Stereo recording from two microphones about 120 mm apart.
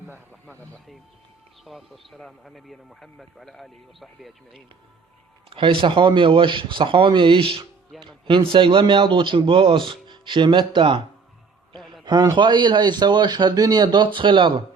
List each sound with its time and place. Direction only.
1.6 s speech: centre (ahead or behind)
5.5 s a man's voice: 45° right (ahead or behind)
12.0 s a man's voice: 35° right (ahead or behind)